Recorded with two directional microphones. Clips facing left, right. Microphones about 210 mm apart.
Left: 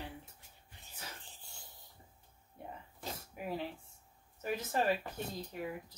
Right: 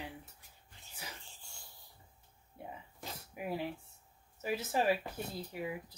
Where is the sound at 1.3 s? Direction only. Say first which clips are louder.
Left 1 dB; 20° left (ahead or behind).